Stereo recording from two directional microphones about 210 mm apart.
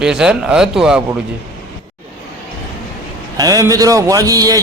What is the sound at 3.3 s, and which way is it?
A man's voice, 15° right (ahead or behind).